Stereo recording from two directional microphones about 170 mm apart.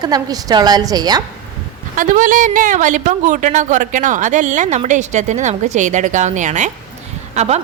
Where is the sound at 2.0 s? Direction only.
50° right (ahead or behind).